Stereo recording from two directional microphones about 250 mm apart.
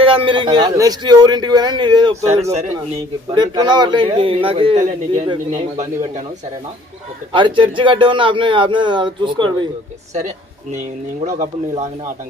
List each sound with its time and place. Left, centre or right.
0.0 s a man's voice: right
7.3 s a man's voice: centre